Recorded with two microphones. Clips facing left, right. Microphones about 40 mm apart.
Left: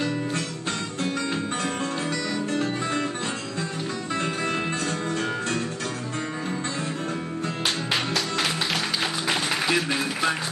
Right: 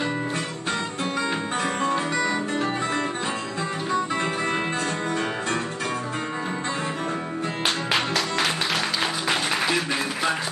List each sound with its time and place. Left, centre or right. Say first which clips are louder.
1.6 s music: right 4 dB; centre
3.9 s music: right 5 dB; right
7.6 s music: right 3 dB; centre